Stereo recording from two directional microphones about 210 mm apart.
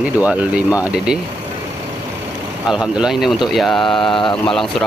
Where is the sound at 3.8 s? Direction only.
25° left (ahead or behind).